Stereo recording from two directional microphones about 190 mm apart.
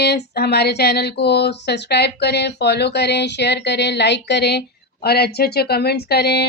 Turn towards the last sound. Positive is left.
turn(degrees=55)  # may be behind; listen again after turning